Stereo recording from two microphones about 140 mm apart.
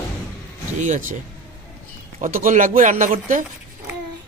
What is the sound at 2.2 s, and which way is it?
Speech, 75° right (ahead or behind).